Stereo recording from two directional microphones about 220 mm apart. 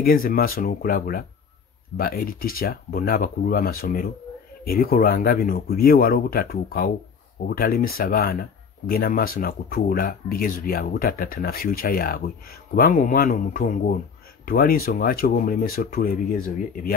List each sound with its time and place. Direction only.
0.0 s speech: 40° left (ahead or behind)